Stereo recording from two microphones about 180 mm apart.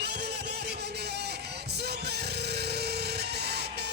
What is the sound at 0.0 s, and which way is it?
Music, 65° right (ahead or behind).